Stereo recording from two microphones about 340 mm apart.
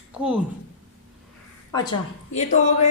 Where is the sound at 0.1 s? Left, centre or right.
Centre.